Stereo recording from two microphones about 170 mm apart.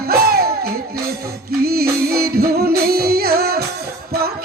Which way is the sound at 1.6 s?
65° right (ahead or behind).